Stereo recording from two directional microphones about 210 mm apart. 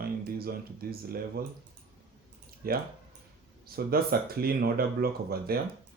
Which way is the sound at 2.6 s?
45° right (ahead or behind).